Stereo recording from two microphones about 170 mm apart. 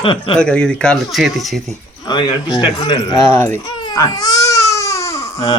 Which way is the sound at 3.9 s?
20° left (ahead or behind).